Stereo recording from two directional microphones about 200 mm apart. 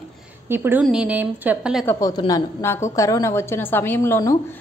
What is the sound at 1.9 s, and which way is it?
A woman's voice, 15° left (ahead or behind).